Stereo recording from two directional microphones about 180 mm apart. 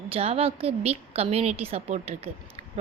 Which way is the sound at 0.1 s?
35° right (ahead or behind).